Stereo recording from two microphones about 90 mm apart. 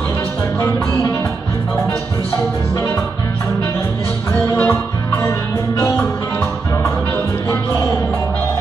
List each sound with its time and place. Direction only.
4.6 s music: 30° left (ahead or behind)